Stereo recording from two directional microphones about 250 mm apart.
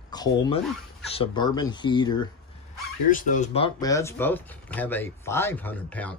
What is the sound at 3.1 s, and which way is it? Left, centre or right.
Speech, left.